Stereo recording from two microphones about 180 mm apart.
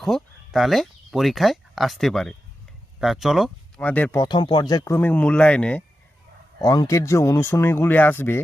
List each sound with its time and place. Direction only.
0.0 s speech: centre (ahead or behind)
4.2 s speech: 25° left (ahead or behind); by 5.8 s 5° left (ahead or behind)
6.6 s speech: 20° left (ahead or behind)